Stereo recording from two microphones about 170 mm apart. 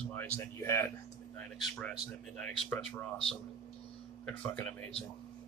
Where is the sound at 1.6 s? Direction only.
5° left (ahead or behind).